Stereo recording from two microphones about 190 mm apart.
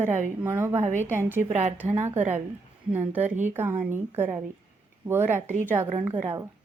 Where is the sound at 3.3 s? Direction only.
40° right (ahead or behind).